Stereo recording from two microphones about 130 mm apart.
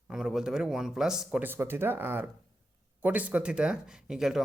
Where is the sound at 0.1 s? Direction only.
5° right (ahead or behind).